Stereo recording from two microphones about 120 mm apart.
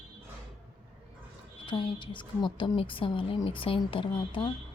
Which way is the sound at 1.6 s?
40° left (ahead or behind).